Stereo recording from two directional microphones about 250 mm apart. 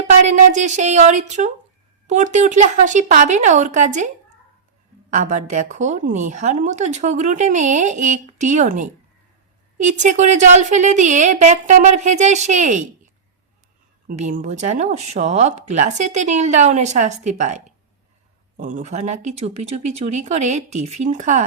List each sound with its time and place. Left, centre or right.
0.3 s a woman's voice: right
5.1 s a woman's voice: right
14.1 s a woman's voice: right